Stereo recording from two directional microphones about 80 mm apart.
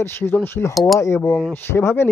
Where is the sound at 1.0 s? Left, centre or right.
Left.